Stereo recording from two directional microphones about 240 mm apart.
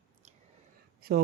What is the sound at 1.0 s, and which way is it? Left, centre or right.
Speech, right.